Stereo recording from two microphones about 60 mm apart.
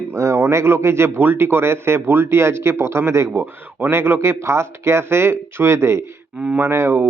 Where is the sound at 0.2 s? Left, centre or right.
Right.